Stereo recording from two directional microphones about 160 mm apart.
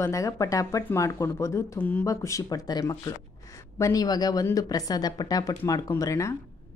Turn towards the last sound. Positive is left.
turn(degrees=20)  # may be behind; listen again after turning